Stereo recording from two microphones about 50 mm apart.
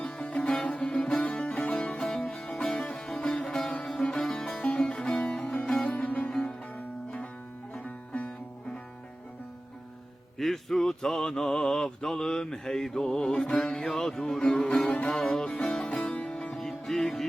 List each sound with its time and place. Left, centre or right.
0.0 s music: centre
0.5 s sitar: centre
1.2 s music: left
5.8 s music: left
6.1 s music: centre
10.3 s a sound: centre
13.8 s music: centre